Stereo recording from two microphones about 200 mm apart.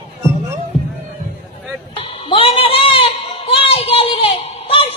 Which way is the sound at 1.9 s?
25° left (ahead or behind).